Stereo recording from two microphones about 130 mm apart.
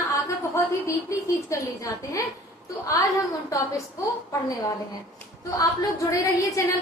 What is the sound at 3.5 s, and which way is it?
Speech, 25° left (ahead or behind).